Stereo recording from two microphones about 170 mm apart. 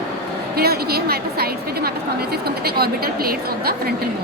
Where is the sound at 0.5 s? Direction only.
65° right (ahead or behind).